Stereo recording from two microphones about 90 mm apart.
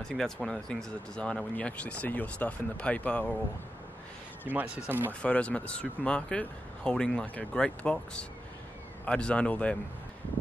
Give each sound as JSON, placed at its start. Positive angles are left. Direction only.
{"t": 0.0, "sound": "speech", "side_deg": 5}
{"t": 4.5, "sound": "speech", "side_deg": -15}
{"t": 5.2, "sound": "speech", "side_deg": 15}